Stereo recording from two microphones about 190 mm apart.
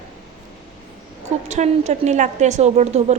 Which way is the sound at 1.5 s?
35° right (ahead or behind).